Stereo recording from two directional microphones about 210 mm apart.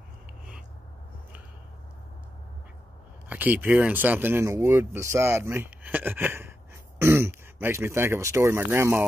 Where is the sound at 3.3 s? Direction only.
10° right (ahead or behind).